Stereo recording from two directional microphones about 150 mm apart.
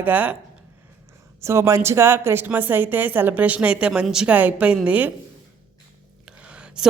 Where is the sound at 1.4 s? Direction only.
20° right (ahead or behind).